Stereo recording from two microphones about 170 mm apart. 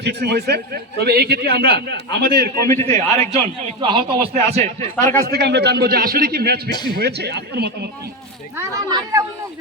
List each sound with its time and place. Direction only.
0.0 s a man's voice: 75° right (ahead or behind)
2.7 s a man's voice: 40° right (ahead or behind)
5.2 s a man's voice: 75° right (ahead or behind)
6.7 s a man's voice: 25° left (ahead or behind)
6.9 s a man's voice: 70° right (ahead or behind)
8.5 s speech: 15° right (ahead or behind)